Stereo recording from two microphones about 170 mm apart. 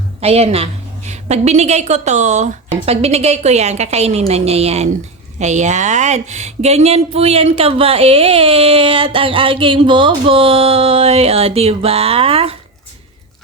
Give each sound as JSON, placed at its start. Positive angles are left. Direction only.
{"t": 0.2, "sound": "speech", "side_deg": -40}